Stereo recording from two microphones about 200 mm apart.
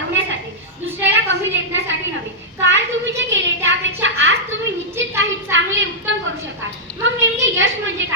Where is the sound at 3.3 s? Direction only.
70° right (ahead or behind).